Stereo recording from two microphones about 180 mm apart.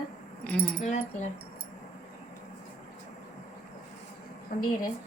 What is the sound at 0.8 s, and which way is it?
Speech, 40° left (ahead or behind).